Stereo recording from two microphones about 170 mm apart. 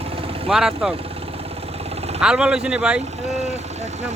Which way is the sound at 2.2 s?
5° right (ahead or behind).